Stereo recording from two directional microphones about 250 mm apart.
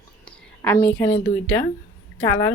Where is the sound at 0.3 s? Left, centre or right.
Centre.